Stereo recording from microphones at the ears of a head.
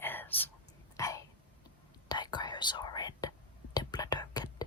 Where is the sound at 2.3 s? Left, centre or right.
Left.